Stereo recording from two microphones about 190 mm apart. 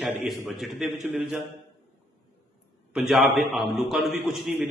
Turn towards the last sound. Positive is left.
turn(degrees=0)  # may be behind; listen again after turning